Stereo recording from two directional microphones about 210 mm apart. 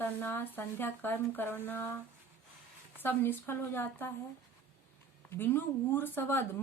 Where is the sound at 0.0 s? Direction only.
10° left (ahead or behind).